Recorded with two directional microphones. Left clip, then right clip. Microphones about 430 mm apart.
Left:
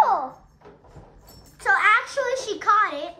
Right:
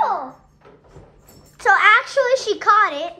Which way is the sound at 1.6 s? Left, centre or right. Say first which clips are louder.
Right 5 dB; centre.